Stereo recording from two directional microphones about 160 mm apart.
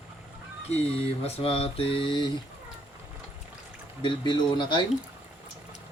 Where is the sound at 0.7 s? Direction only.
40° left (ahead or behind).